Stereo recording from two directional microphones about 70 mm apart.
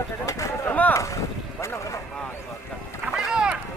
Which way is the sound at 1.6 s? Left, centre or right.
Left.